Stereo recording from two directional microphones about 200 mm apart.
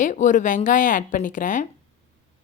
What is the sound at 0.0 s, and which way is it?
A woman's voice, 40° left (ahead or behind).